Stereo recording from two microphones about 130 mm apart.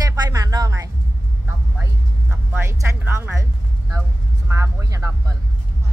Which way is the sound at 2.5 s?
20° right (ahead or behind).